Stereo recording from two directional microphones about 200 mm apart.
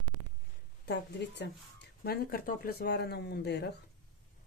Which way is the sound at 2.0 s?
50° left (ahead or behind).